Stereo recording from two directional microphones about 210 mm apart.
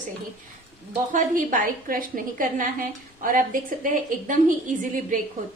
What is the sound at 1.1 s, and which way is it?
A woman's voice, 40° right (ahead or behind).